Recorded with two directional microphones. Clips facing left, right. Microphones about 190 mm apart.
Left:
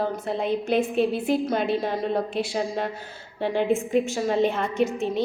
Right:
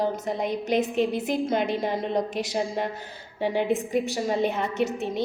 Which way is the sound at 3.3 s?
15° right (ahead or behind).